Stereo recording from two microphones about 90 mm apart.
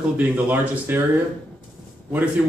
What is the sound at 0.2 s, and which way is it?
Speech, 20° right (ahead or behind).